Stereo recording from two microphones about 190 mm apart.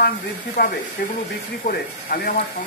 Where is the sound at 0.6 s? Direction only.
50° left (ahead or behind).